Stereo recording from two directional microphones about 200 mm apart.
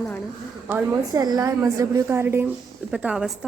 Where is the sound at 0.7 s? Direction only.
5° right (ahead or behind).